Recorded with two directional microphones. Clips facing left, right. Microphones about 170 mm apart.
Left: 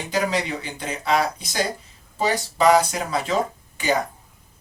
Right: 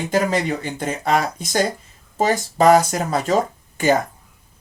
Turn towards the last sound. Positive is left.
turn(degrees=-50)  # may be behind; listen again after turning